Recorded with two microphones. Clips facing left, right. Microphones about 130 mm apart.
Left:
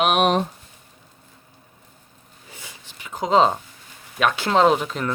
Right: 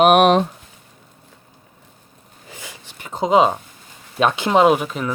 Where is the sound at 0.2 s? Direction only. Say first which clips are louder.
Right 5 dB; 90° right.